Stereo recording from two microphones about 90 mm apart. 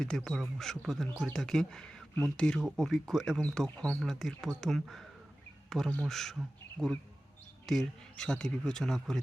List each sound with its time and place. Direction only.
0.1 s a man's voice: 5° left (ahead or behind)